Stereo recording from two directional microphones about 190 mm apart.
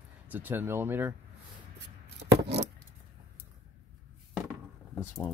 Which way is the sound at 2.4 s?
65° right (ahead or behind).